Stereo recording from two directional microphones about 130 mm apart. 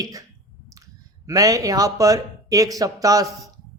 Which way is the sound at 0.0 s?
25° right (ahead or behind).